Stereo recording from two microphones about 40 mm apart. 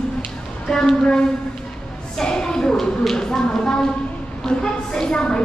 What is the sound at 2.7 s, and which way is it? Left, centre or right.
A woman's voice, centre.